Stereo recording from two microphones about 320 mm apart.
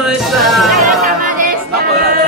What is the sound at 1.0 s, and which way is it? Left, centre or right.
Music, right.